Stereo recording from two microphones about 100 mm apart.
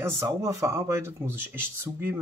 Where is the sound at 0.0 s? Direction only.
30° right (ahead or behind).